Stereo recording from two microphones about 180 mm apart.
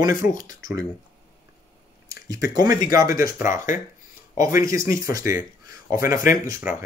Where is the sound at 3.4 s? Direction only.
45° left (ahead or behind).